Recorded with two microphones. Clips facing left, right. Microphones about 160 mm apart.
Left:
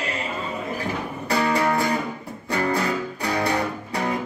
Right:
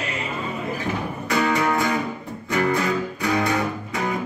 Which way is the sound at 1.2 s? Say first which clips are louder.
Even; 30° left (ahead or behind).